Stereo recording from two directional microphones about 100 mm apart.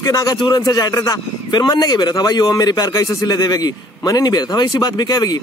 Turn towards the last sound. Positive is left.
turn(degrees=40)  # may be behind; listen again after turning